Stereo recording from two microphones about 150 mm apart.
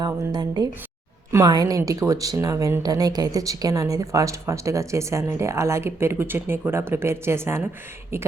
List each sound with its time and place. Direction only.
0.0 s speech: 25° right (ahead or behind)